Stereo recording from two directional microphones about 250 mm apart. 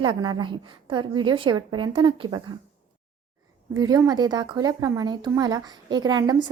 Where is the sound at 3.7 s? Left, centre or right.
Centre.